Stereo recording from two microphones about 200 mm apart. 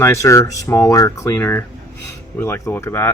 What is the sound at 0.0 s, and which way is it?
Speech, 15° left (ahead or behind).